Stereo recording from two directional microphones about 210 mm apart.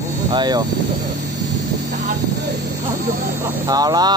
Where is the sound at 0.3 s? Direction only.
20° right (ahead or behind).